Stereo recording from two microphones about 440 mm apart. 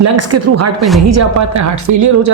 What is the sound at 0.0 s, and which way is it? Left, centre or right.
Speech, right.